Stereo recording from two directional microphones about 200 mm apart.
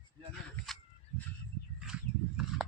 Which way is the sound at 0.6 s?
Centre (ahead or behind).